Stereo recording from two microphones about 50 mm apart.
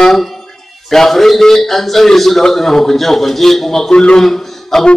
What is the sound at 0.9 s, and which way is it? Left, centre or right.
A man's voice, centre.